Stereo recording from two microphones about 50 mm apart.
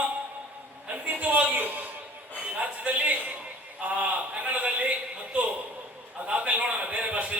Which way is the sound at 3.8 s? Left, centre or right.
Right.